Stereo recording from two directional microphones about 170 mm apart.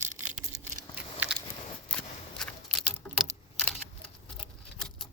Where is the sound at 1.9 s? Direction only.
5° left (ahead or behind).